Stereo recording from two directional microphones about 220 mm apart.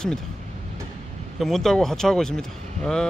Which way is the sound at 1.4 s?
Centre (ahead or behind).